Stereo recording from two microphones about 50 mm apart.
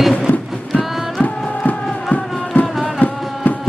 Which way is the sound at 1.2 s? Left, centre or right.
Left.